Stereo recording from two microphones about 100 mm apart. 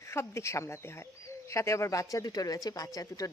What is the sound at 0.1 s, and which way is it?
Speech, 30° left (ahead or behind).